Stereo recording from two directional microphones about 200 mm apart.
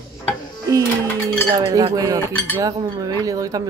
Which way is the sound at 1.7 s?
15° right (ahead or behind).